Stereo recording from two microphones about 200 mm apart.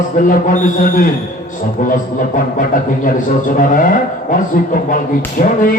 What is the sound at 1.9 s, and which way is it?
Speech, 40° left (ahead or behind).